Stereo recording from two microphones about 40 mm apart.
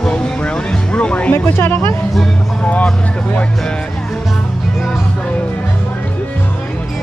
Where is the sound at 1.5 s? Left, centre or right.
Left.